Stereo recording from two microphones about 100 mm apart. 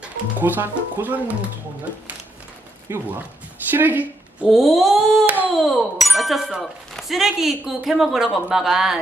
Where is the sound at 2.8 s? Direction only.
20° right (ahead or behind).